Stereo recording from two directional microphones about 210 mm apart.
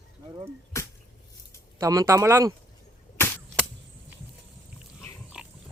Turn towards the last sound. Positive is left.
turn(degrees=-5)  # may be behind; listen again after turning